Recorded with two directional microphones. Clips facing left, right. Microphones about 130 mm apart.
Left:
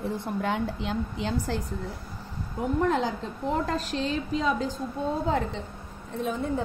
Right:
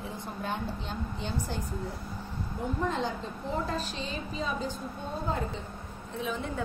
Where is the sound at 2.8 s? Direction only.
90° left.